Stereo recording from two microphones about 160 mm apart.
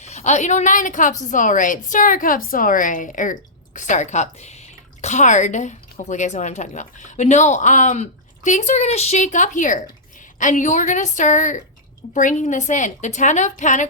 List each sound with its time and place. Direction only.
0.0 s a woman's voice: 45° left (ahead or behind)